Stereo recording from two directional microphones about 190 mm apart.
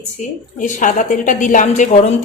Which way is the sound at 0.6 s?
40° left (ahead or behind).